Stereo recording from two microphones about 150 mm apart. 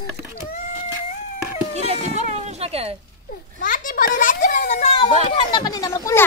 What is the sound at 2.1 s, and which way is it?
Music, 50° right (ahead or behind).